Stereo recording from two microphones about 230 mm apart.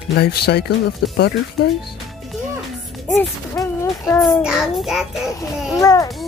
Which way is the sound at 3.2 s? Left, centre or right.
Centre.